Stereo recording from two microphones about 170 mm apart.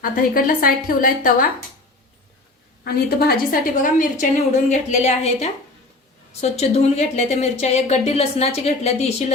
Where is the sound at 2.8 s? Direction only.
65° left (ahead or behind).